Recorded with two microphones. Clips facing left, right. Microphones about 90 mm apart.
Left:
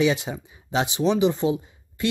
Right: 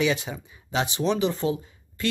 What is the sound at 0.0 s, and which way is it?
Speech, 25° left (ahead or behind).